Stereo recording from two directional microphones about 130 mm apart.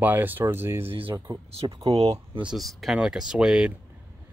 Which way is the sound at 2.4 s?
Centre (ahead or behind).